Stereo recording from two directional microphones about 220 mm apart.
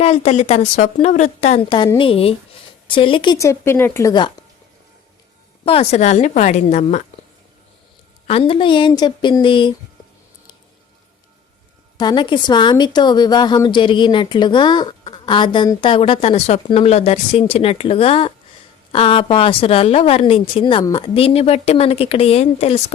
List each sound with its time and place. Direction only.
0.0 s a woman's voice: 30° left (ahead or behind)
5.6 s a woman's voice: 25° left (ahead or behind)
8.3 s a woman's voice: 25° left (ahead or behind)
11.9 s a woman's voice: 20° left (ahead or behind)